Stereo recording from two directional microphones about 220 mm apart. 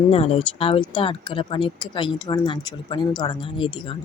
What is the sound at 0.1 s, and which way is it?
Speech, 25° left (ahead or behind).